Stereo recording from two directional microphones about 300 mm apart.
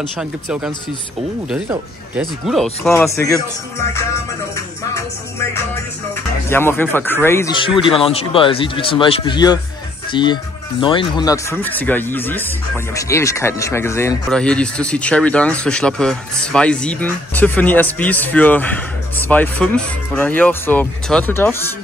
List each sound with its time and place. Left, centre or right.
0.2 s speech: centre
6.5 s speech: centre